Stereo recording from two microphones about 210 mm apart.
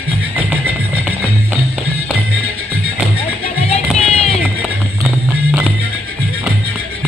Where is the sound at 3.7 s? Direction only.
30° left (ahead or behind).